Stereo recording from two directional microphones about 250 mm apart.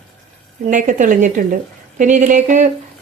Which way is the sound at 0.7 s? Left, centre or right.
Right.